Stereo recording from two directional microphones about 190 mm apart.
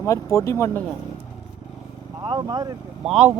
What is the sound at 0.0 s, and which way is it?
Speech, 15° left (ahead or behind).